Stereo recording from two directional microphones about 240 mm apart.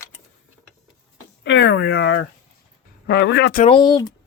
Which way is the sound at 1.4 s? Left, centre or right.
Left.